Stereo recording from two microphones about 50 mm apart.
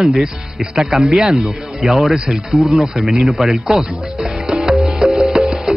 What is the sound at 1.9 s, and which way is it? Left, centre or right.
Speech, centre.